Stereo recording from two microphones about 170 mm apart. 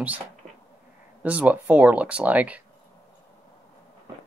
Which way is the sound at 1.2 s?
10° right (ahead or behind).